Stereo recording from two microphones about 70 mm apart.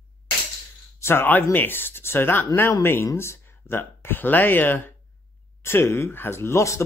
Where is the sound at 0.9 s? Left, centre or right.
Left.